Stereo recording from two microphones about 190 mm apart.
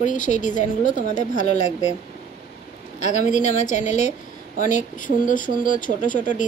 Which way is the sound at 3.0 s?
40° left (ahead or behind).